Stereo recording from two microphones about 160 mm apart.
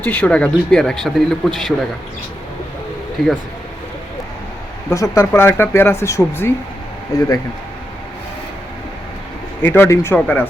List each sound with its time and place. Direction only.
0.0 s speech: 10° left (ahead or behind)
3.2 s speech: centre (ahead or behind)
4.9 s speech: 20° left (ahead or behind)
9.6 s speech: 10° left (ahead or behind)